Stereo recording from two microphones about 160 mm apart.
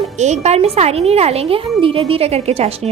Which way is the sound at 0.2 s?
45° right (ahead or behind).